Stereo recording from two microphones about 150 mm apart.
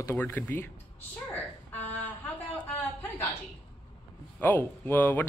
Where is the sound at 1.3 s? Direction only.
10° left (ahead or behind).